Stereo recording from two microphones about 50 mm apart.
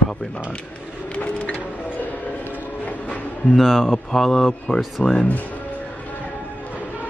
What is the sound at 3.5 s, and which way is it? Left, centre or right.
Speech, centre.